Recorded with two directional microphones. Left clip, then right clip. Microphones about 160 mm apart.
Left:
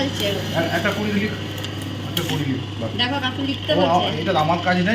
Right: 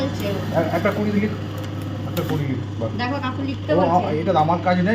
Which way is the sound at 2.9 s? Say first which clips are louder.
Left 5 dB; 70° right (ahead or behind).